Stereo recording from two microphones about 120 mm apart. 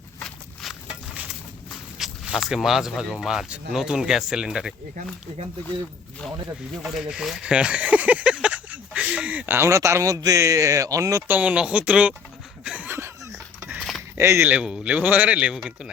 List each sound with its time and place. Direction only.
0.3 s walk: centre (ahead or behind)
1.1 s a sound: 15° right (ahead or behind)
2.0 s speech: 5° right (ahead or behind)
6.8 s speech: 5° right (ahead or behind); by 11.2 s 25° right (ahead or behind)
11.3 s speech: 10° right (ahead or behind)
12.6 s chuckle: 10° right (ahead or behind)
14.2 s speech: 20° right (ahead or behind)
14.5 s speech: 10° right (ahead or behind)